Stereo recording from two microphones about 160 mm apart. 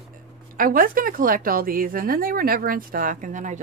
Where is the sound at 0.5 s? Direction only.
60° right (ahead or behind).